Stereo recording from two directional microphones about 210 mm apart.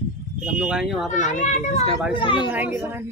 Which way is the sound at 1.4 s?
35° left (ahead or behind).